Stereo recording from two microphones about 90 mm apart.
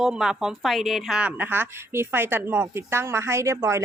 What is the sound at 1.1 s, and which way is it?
Speech, 20° right (ahead or behind).